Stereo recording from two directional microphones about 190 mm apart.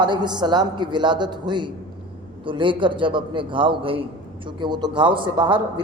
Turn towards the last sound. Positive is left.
turn(degrees=-25)  # may be behind; listen again after turning